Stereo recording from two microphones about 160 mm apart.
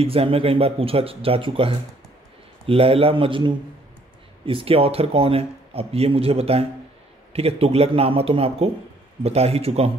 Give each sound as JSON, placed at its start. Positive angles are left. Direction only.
{"t": 0.0, "sound": "speech", "side_deg": -35}